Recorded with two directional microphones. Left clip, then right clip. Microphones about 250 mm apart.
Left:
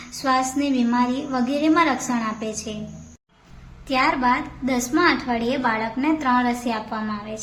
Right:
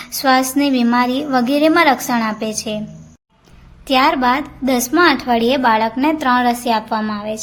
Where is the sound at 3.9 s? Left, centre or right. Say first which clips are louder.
Right 6 dB; right.